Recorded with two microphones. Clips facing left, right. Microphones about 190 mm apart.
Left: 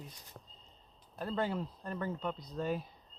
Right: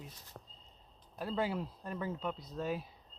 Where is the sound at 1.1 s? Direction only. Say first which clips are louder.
Even; 5° right (ahead or behind).